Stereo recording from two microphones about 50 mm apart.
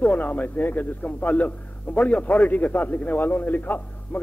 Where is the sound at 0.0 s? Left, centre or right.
Left.